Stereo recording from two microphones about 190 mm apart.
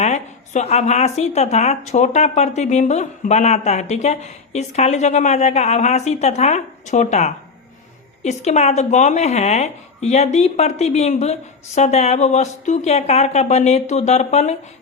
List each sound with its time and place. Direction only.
0.0 s speech: 35° left (ahead or behind)